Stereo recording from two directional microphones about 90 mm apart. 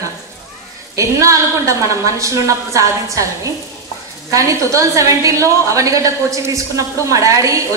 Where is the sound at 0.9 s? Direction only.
35° right (ahead or behind).